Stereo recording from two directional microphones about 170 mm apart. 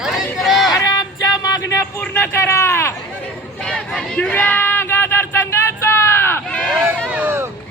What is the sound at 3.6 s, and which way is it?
Crowd, 5° left (ahead or behind).